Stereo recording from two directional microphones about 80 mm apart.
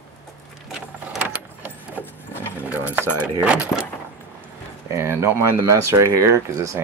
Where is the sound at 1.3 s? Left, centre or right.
Centre.